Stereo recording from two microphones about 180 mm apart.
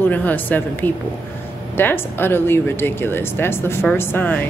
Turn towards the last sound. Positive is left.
turn(degrees=10)  # may be behind; listen again after turning